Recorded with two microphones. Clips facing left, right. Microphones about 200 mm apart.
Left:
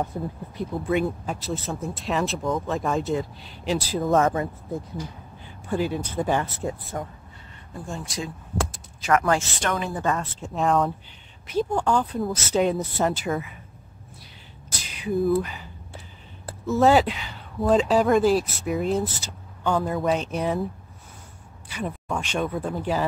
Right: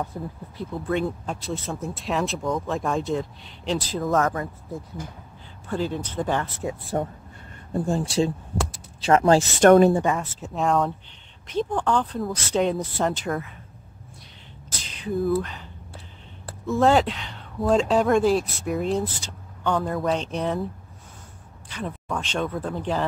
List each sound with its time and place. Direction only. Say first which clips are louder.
0.1 s speech: left 3 dB; 20° left (ahead or behind)
0.6 s speech: left 2 dB; 10° left (ahead or behind)
4.1 s speech: left 2 dB; 20° left (ahead or behind)
5.7 s speech: left 1 dB; 10° left (ahead or behind)
6.9 s speech: right 6 dB; 35° right (ahead or behind)
9.6 s speech: right 14 dB; 45° right (ahead or behind)
10.0 s speech: right 1 dB; 5° right (ahead or behind)
14.8 s speech: left 2 dB; 10° left (ahead or behind)
21.6 s a sound: left 1 dB; 10° left (ahead or behind)
22.1 s speech: even; 10° left (ahead or behind)